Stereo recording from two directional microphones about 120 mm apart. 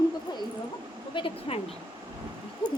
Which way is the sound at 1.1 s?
50° left (ahead or behind).